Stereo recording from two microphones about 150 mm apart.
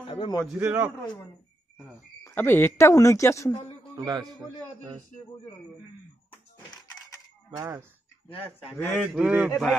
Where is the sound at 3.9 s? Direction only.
25° right (ahead or behind).